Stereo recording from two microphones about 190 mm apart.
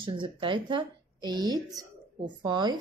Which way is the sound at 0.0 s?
25° right (ahead or behind).